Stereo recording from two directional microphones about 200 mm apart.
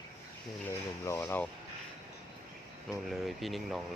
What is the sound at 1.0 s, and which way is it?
Speech, 15° left (ahead or behind).